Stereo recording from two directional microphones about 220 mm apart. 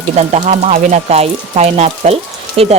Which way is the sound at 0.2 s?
30° right (ahead or behind).